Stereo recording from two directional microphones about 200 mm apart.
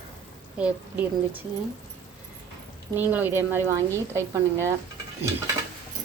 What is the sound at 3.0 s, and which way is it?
Speech, 10° right (ahead or behind).